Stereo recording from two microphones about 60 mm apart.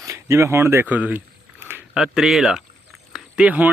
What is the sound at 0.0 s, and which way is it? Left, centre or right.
Speech, right.